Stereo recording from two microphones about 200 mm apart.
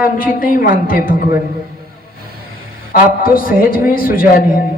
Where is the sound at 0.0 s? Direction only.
45° left (ahead or behind).